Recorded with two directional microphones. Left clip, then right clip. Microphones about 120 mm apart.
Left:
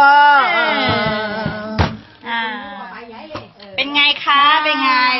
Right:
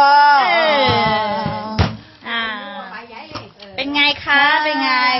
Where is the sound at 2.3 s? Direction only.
50° right (ahead or behind).